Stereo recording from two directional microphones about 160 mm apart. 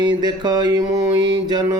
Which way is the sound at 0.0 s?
25° right (ahead or behind).